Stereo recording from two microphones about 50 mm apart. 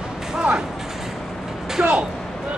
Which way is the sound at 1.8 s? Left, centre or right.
Right.